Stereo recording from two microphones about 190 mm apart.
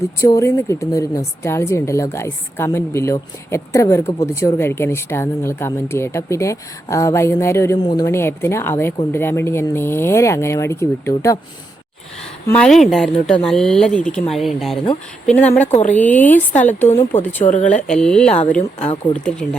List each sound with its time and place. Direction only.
0.2 s a woman's voice: 15° left (ahead or behind)
12.5 s a woman's voice: 5° left (ahead or behind)
15.6 s speech: 35° left (ahead or behind)
15.9 s a woman's voice: 10° left (ahead or behind)
18.8 s speech: 30° left (ahead or behind)
19.1 s speech: 5° left (ahead or behind)